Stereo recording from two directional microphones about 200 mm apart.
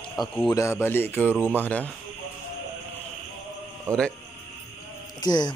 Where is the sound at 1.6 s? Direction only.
5° left (ahead or behind).